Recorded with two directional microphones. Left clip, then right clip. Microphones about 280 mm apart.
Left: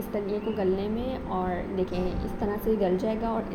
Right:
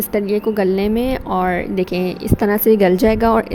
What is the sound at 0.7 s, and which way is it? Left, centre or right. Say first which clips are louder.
Speech: right 13 dB; right.